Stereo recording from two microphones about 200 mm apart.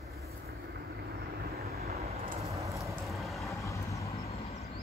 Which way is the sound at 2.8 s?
Centre (ahead or behind).